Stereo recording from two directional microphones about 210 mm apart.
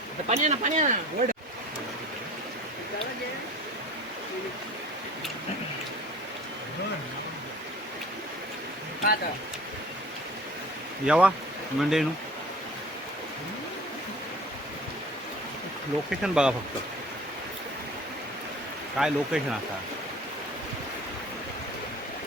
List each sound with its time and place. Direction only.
0.3 s speech: 35° right (ahead or behind)
11.0 s speech: 5° right (ahead or behind)
16.2 s speech: 5° right (ahead or behind)
18.9 s speech: 5° right (ahead or behind)